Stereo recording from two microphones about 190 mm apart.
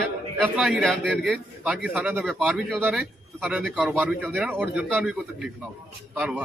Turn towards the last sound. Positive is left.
turn(degrees=-5)  # may be behind; listen again after turning